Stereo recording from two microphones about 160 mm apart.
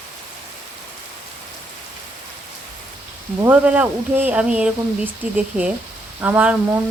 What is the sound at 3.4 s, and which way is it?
Speech, 10° right (ahead or behind).